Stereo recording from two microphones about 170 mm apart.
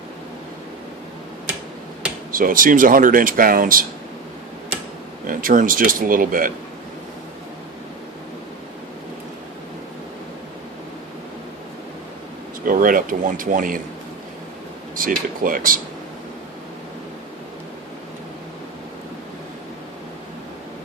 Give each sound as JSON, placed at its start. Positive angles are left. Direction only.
{"t": 2.3, "sound": "speech", "side_deg": -55}
{"t": 5.2, "sound": "speech", "side_deg": -55}
{"t": 12.6, "sound": "speech", "side_deg": -55}
{"t": 14.9, "sound": "speech", "side_deg": -55}